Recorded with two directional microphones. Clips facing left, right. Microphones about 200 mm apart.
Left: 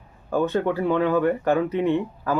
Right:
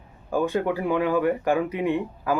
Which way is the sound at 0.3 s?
10° right (ahead or behind).